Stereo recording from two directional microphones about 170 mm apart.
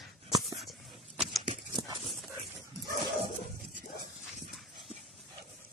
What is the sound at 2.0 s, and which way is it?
Dog, centre (ahead or behind).